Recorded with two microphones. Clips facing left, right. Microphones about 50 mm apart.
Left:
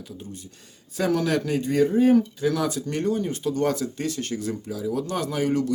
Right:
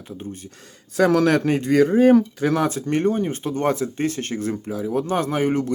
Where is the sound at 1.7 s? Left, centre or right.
Right.